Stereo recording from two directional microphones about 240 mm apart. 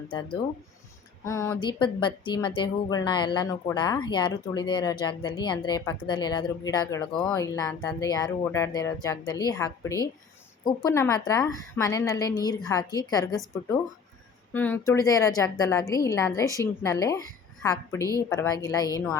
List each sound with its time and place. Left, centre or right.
1.2 s a woman's voice: centre
14.5 s speech: centre